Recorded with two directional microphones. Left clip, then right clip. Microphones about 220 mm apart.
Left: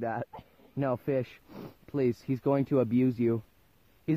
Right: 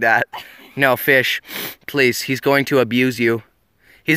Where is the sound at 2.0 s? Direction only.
5° right (ahead or behind).